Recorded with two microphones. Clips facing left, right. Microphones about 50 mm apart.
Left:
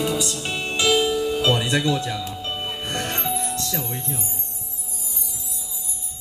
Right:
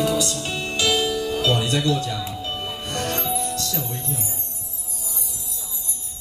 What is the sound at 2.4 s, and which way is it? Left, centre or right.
Music, left.